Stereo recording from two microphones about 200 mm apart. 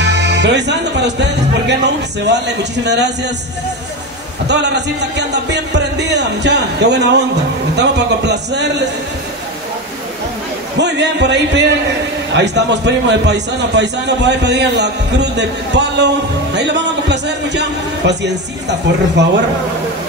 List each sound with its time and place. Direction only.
0.0 s a man's voice: 60° right (ahead or behind)
4.5 s a man's voice: 60° right (ahead or behind)
10.8 s a man's voice: 60° right (ahead or behind)